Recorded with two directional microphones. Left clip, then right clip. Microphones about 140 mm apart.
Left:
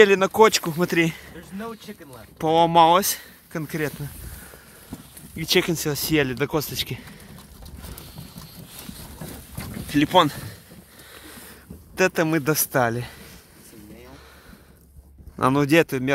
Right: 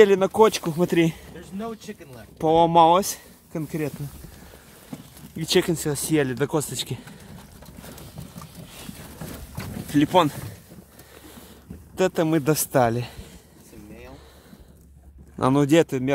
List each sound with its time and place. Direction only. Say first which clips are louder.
0.0 s speech: left 1 dB; 15° right (ahead or behind)
0.7 s speech: even; 25° right (ahead or behind)
2.3 s speech: even; 15° right (ahead or behind)
5.3 s speech: left 1 dB; 20° right (ahead or behind)
6.3 s speech: even; 20° right (ahead or behind)
9.8 s speech: left 1 dB; 15° right (ahead or behind)
11.9 s speech: left 1 dB; 10° right (ahead or behind)
12.4 s speech: right 1 dB; 25° right (ahead or behind)
15.4 s speech: even; 15° right (ahead or behind)